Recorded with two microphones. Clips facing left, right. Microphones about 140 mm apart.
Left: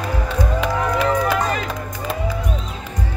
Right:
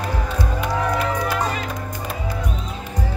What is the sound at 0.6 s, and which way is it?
Music, 90° left.